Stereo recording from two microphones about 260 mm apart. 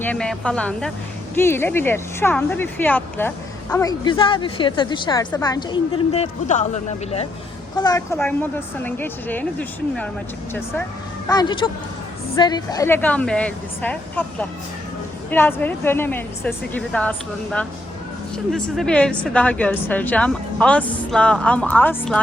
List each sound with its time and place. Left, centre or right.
0.0 s speech: centre; by 6.7 s left
7.8 s speech: centre
11.3 s speech: centre